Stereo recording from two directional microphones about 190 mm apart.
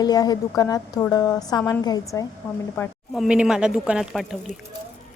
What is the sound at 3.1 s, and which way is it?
Speech, 5° right (ahead or behind).